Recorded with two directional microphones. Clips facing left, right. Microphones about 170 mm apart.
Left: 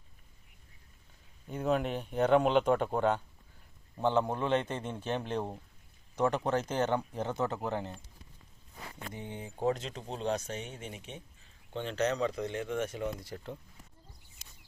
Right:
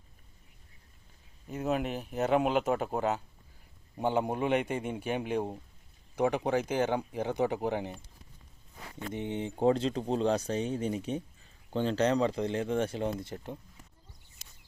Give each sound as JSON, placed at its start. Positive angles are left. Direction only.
{"t": 1.5, "sound": "speech", "side_deg": -5}
{"t": 9.1, "sound": "speech", "side_deg": -20}